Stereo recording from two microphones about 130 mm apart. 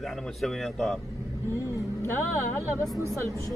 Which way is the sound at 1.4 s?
25° left (ahead or behind).